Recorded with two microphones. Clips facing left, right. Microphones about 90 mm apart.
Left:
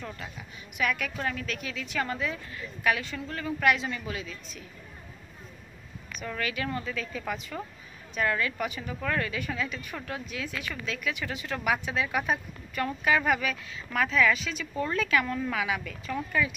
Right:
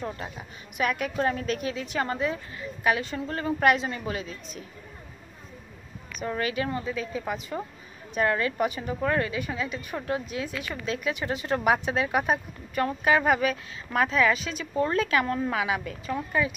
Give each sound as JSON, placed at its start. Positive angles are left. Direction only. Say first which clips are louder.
{"t": 0.7, "sound": "a woman's voice", "louder": "right 4 dB", "side_deg": -30}
{"t": 6.2, "sound": "a woman's voice", "louder": "right 4 dB", "side_deg": -30}
{"t": 8.2, "sound": "a woman's voice", "louder": "right 4 dB", "side_deg": -35}